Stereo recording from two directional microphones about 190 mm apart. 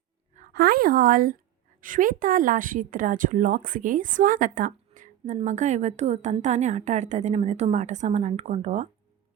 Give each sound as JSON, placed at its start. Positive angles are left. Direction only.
{"t": 0.3, "sound": "a woman's voice", "side_deg": -55}